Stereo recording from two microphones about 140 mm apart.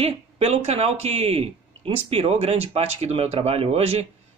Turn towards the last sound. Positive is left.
turn(degrees=-45)  # may be behind; listen again after turning